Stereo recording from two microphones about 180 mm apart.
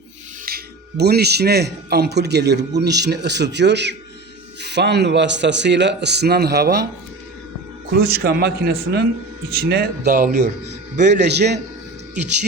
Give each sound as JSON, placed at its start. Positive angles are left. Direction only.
{"t": 0.4, "sound": "speech", "side_deg": -60}
{"t": 7.9, "sound": "a man's voice", "side_deg": -60}
{"t": 10.1, "sound": "speech", "side_deg": -45}
{"t": 11.1, "sound": "speech", "side_deg": -70}